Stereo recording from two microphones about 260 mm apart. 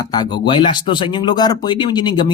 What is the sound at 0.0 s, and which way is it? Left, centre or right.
Speech, centre.